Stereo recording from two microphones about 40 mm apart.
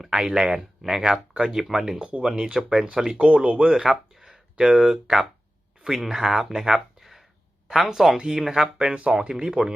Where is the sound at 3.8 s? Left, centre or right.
Centre.